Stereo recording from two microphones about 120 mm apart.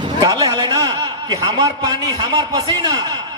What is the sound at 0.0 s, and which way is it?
A man's voice, 35° right (ahead or behind).